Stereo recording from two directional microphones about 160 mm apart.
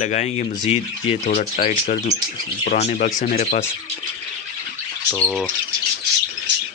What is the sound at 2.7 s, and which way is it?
Speech, 50° left (ahead or behind).